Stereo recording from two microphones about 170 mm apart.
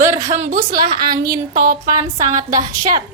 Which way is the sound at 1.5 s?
60° right (ahead or behind).